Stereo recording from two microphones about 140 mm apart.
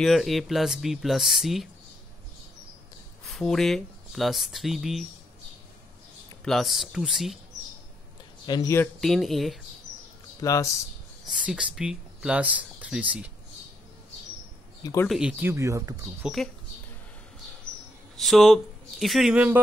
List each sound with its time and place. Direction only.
0.0 s speech: centre (ahead or behind)
3.3 s speech: 5° left (ahead or behind)
6.4 s speech: centre (ahead or behind)
8.5 s speech: 25° left (ahead or behind)
9.0 s speech: centre (ahead or behind)
10.4 s speech: 25° left (ahead or behind)
11.3 s speech: 5° right (ahead or behind)
14.8 s speech: 25° left (ahead or behind)
15.0 s speech: 5° right (ahead or behind); by 16.3 s 20° right (ahead or behind)
18.1 s speech: centre (ahead or behind)